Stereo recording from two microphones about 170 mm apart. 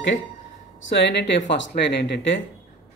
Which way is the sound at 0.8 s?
90° left.